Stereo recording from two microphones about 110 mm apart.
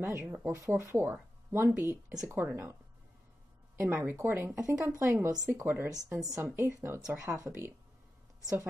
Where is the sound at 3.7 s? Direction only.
20° right (ahead or behind).